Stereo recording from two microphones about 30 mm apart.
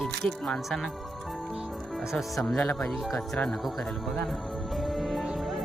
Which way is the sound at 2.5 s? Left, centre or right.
Left.